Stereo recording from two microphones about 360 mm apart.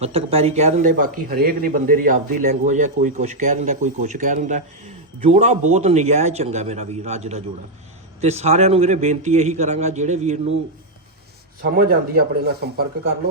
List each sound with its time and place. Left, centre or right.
0.0 s a man's voice: centre
11.8 s a man's voice: right